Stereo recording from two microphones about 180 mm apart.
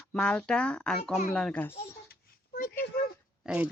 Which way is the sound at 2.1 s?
50° left (ahead or behind).